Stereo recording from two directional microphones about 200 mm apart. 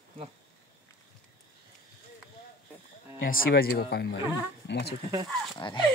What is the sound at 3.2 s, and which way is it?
Speech, 45° left (ahead or behind).